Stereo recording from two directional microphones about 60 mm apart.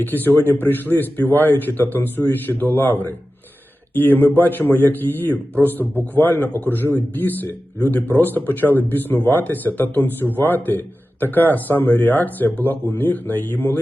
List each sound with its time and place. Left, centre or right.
0.0 s speech: left